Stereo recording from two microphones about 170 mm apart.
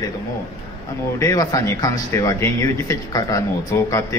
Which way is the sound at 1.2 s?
20° left (ahead or behind).